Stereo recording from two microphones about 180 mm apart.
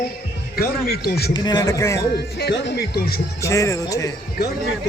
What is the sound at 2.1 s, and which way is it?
Speech, 65° left (ahead or behind).